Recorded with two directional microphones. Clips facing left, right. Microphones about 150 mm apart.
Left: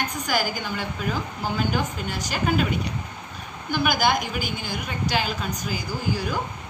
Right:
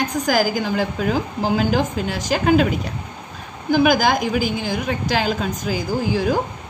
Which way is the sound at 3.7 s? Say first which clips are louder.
Right 6 dB; 90° right.